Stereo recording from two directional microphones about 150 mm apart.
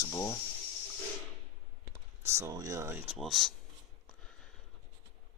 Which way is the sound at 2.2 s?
20° right (ahead or behind).